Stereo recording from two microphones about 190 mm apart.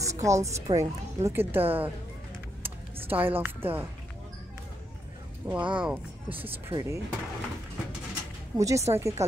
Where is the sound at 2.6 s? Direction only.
10° right (ahead or behind).